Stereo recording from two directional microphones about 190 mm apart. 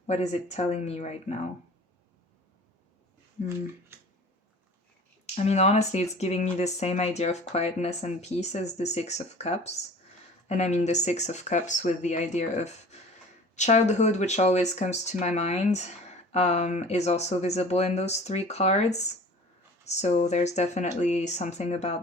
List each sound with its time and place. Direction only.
0.1 s speech: 35° left (ahead or behind)
5.2 s speech: 35° left (ahead or behind)